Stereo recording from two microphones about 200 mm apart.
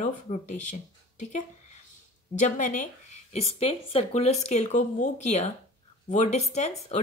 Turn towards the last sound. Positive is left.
turn(degrees=35)  # may be behind; listen again after turning